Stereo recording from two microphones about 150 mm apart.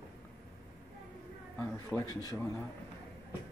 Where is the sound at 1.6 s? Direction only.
15° left (ahead or behind).